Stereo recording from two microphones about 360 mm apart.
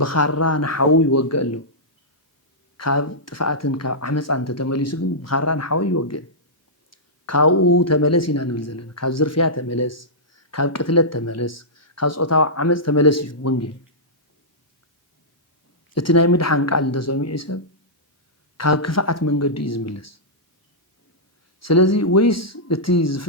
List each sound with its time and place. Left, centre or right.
0.0 s speech: left
2.7 s speech: left
16.0 s speech: left
21.6 s speech: left